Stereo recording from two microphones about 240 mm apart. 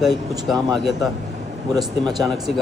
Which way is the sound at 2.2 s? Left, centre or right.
Centre.